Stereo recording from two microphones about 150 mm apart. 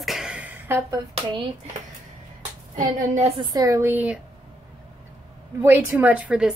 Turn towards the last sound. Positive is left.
turn(degrees=-5)  # may be behind; listen again after turning